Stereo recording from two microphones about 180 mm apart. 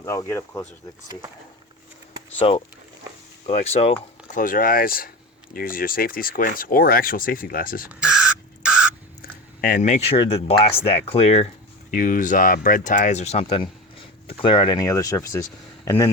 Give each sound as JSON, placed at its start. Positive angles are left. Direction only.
{"t": 0.0, "sound": "speech", "side_deg": 15}
{"t": 2.4, "sound": "speech", "side_deg": 30}
{"t": 7.9, "sound": "rodents", "side_deg": -5}
{"t": 9.6, "sound": "speech", "side_deg": 50}
{"t": 11.9, "sound": "speech", "side_deg": 50}